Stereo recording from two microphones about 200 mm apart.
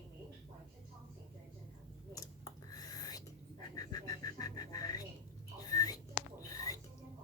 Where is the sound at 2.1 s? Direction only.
20° left (ahead or behind).